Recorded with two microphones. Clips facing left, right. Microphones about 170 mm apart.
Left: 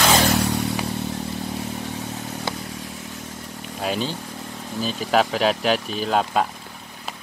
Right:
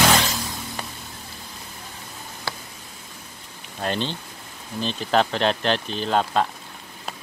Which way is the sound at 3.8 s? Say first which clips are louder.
Left 1 dB; 5° left (ahead or behind).